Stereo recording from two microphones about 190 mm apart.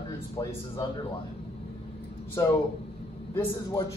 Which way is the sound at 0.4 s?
20° left (ahead or behind).